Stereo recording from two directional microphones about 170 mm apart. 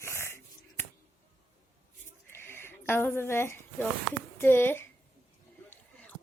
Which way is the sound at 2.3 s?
15° left (ahead or behind).